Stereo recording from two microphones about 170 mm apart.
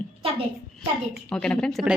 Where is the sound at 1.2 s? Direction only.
5° left (ahead or behind).